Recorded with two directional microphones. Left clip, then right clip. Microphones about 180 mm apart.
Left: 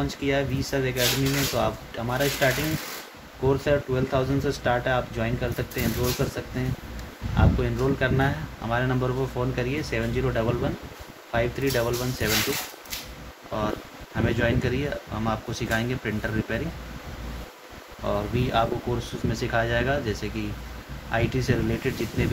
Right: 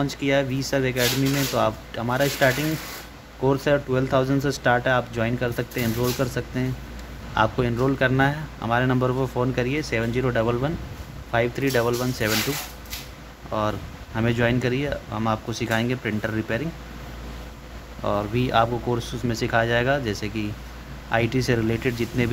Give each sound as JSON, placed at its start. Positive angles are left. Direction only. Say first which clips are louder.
{"t": 0.0, "sound": "speech", "louder": "right 3 dB", "side_deg": -50}
{"t": 13.5, "sound": "speech", "louder": "right 3 dB", "side_deg": -40}
{"t": 18.0, "sound": "speech", "louder": "right 3 dB", "side_deg": -50}